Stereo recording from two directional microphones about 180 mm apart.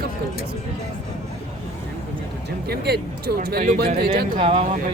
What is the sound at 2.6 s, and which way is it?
Speech, 60° right (ahead or behind).